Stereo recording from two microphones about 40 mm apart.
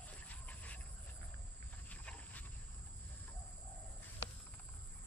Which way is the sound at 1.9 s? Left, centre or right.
Left.